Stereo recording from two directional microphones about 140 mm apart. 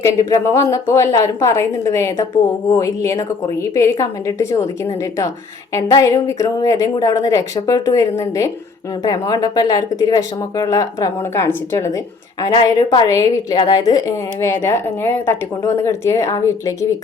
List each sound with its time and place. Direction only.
0.0 s speech: 20° left (ahead or behind)